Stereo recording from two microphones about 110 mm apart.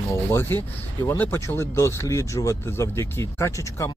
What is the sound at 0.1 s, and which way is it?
Speech, 25° left (ahead or behind).